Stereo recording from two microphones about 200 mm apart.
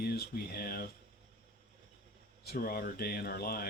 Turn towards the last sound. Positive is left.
turn(degrees=50)  # may be behind; listen again after turning